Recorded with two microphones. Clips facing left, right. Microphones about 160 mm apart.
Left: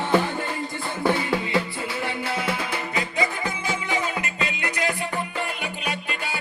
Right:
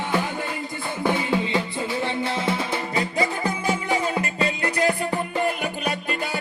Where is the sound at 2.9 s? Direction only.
35° right (ahead or behind).